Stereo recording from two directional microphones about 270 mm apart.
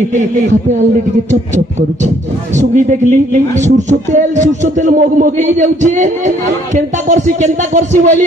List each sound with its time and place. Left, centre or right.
2.5 s a man's voice: right